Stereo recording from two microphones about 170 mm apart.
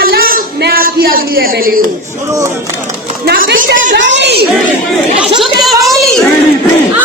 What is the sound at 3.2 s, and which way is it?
Speech, 65° right (ahead or behind).